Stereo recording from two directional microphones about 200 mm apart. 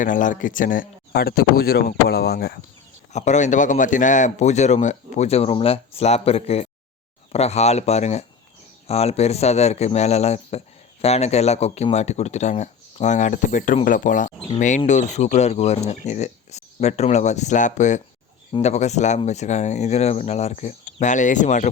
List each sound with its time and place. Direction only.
0.0 s speech: 40° left (ahead or behind)
3.1 s a man's voice: 35° left (ahead or behind)